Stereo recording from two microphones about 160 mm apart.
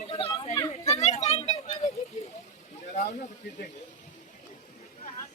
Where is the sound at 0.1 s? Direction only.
35° left (ahead or behind).